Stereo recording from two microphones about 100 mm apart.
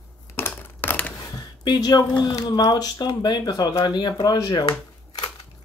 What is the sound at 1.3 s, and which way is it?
Speech, 45° left (ahead or behind).